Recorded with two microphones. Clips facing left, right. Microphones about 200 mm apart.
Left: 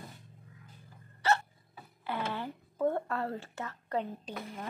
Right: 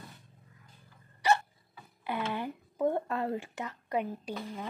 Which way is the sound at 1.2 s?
15° right (ahead or behind).